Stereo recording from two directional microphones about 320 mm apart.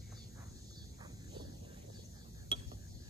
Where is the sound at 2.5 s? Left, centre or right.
Centre.